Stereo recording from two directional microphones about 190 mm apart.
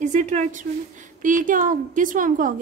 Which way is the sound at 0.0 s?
40° right (ahead or behind).